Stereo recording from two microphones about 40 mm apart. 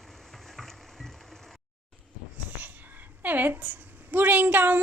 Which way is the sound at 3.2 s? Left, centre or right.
Right.